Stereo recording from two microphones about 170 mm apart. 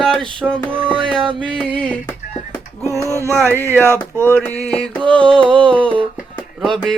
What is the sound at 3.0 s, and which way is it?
Speech, 15° right (ahead or behind).